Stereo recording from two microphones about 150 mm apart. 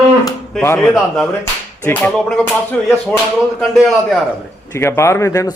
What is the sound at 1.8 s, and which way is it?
Clapping, 10° left (ahead or behind).